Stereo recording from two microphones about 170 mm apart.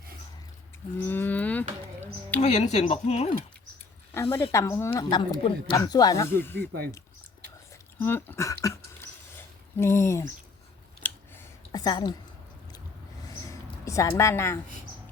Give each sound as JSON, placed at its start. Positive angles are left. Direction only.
{"t": 0.9, "sound": "cattle", "side_deg": 10}
{"t": 2.4, "sound": "speech", "side_deg": 40}
{"t": 4.1, "sound": "speech", "side_deg": 15}
{"t": 7.7, "sound": "a sound", "side_deg": 15}
{"t": 9.8, "sound": "speech", "side_deg": 15}
{"t": 11.7, "sound": "a woman's voice", "side_deg": 25}
{"t": 13.2, "sound": "a sound", "side_deg": 20}